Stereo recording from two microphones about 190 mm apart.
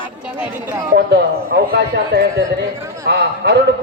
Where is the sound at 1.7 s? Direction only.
60° right (ahead or behind).